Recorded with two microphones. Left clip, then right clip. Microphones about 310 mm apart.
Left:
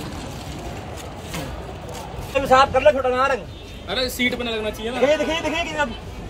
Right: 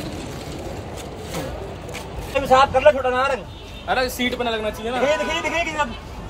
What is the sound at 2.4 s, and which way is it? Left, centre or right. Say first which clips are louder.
Speech: right 1 dB; right.